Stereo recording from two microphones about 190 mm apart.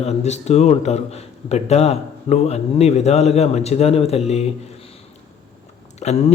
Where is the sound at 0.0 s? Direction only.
35° left (ahead or behind).